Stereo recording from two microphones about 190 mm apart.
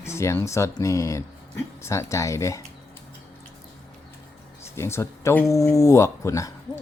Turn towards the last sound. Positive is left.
turn(degrees=15)  # may be behind; listen again after turning